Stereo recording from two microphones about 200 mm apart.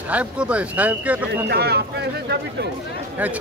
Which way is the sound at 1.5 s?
55° right (ahead or behind).